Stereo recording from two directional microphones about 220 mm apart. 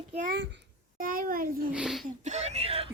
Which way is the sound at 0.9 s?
40° right (ahead or behind).